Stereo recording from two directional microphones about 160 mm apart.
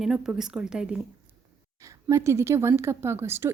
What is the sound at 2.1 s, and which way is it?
Speech, 20° right (ahead or behind).